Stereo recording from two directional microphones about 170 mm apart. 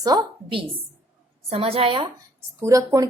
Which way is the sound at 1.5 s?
35° right (ahead or behind).